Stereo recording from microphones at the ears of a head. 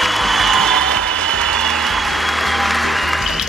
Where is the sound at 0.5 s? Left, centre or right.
Right.